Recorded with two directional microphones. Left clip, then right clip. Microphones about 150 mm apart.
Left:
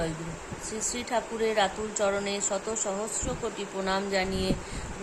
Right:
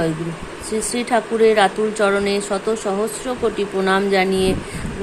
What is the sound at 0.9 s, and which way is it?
A woman's voice, 20° right (ahead or behind).